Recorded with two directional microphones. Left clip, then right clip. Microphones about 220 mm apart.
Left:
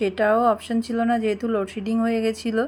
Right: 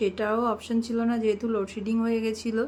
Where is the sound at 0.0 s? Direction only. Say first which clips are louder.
Left 7 dB; 15° left (ahead or behind).